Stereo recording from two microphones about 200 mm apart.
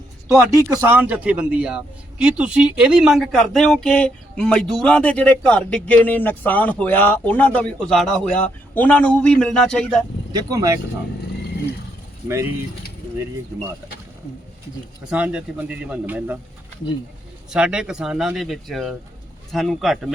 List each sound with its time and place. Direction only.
0.3 s a man's voice: 15° right (ahead or behind); by 10.0 s 5° left (ahead or behind)
10.3 s speech: 15° right (ahead or behind)
15.1 s speech: 5° right (ahead or behind)
17.5 s a man's voice: 5° right (ahead or behind)